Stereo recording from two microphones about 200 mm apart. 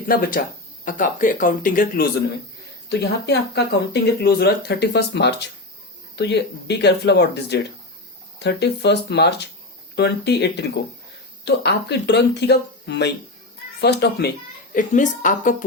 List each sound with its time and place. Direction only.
0.1 s speech: 45° left (ahead or behind)
2.9 s speech: 55° left (ahead or behind); by 15.5 s 40° left (ahead or behind)